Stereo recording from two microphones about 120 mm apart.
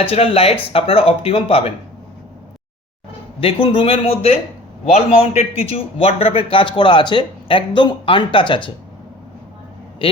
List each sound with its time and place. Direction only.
0.0 s a man's voice: 50° left (ahead or behind)
3.4 s a man's voice: 50° left (ahead or behind)